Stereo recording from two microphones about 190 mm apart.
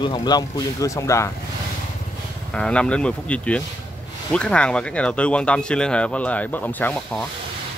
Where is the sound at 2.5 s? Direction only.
5° left (ahead or behind).